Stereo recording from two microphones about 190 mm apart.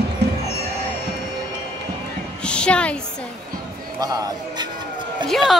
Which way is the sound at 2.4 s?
5° left (ahead or behind).